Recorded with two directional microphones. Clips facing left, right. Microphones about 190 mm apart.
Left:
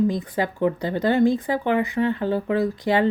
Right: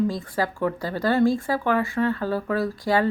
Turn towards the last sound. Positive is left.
turn(degrees=20)  # may be behind; listen again after turning